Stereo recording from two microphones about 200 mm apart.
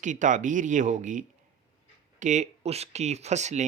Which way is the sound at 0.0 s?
40° right (ahead or behind).